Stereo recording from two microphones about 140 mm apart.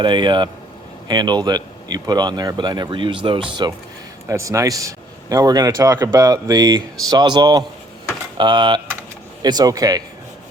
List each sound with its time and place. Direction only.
0.0 s speech: 35° right (ahead or behind)
4.3 s a man's voice: 20° right (ahead or behind)